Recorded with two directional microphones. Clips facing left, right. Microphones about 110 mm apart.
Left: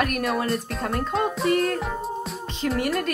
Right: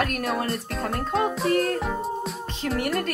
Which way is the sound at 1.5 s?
35° right (ahead or behind).